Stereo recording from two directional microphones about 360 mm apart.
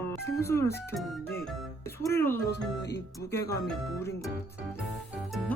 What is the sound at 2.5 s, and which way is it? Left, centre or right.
Speech, left.